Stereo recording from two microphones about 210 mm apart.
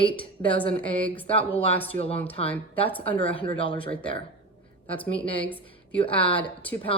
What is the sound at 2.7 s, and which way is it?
Speech, 5° left (ahead or behind).